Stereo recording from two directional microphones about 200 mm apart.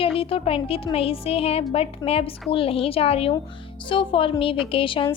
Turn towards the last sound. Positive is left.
turn(degrees=25)  # may be behind; listen again after turning